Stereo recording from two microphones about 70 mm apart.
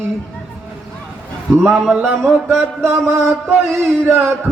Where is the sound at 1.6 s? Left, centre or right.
Centre.